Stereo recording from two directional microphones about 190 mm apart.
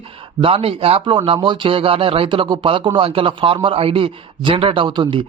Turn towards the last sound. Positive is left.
turn(degrees=-25)  # may be behind; listen again after turning